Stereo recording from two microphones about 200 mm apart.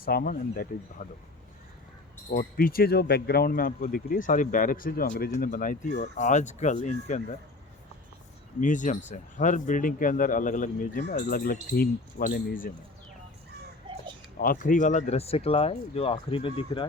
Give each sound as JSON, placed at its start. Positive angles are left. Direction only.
{"t": 0.0, "sound": "speech", "side_deg": 45}
{"t": 2.3, "sound": "speech", "side_deg": 45}
{"t": 8.6, "sound": "speech", "side_deg": 40}
{"t": 13.9, "sound": "a sound", "side_deg": -25}
{"t": 14.3, "sound": "speech", "side_deg": 45}